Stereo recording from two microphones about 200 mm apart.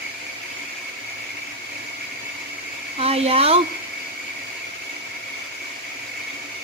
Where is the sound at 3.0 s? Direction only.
30° right (ahead or behind).